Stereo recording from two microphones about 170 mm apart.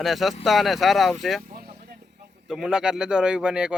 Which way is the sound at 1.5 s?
60° right (ahead or behind).